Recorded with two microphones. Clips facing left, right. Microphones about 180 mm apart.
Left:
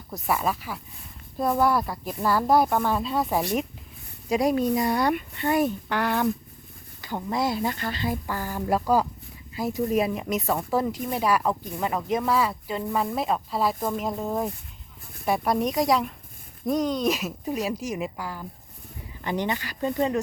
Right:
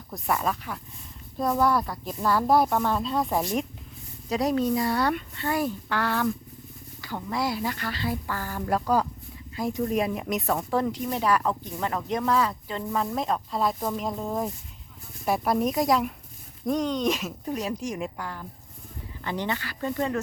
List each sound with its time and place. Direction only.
0.1 s speech: 5° left (ahead or behind)